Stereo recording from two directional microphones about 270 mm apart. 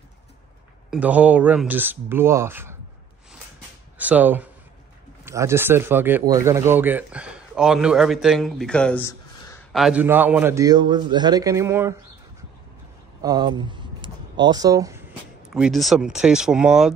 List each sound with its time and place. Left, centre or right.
0.8 s a man's voice: centre
4.0 s speech: centre
9.8 s a man's voice: centre
13.2 s speech: centre
15.5 s speech: centre